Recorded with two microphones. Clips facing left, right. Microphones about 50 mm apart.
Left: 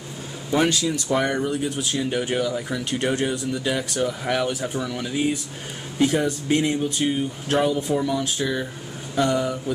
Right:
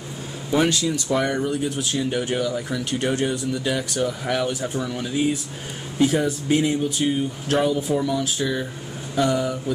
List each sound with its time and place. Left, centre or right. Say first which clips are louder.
0.5 s speech: even; centre
1.1 s speech: even; centre
5.9 s speech: right 1 dB; centre